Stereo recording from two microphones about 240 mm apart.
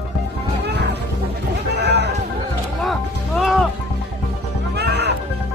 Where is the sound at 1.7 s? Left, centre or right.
Right.